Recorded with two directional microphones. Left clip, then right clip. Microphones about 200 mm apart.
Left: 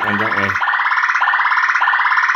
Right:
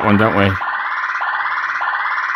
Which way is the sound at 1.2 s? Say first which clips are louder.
Left 5 dB; centre (ahead or behind).